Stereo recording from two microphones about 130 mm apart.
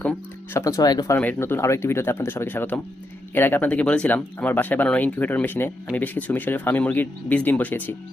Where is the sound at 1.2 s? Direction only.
15° left (ahead or behind).